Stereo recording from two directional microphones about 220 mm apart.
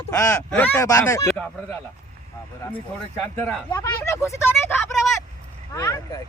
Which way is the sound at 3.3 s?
5° left (ahead or behind).